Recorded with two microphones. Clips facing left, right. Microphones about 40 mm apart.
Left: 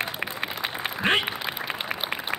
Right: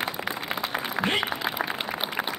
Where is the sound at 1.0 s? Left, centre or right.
Right.